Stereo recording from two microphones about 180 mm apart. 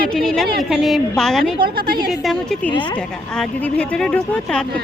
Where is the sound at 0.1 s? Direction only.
5° left (ahead or behind).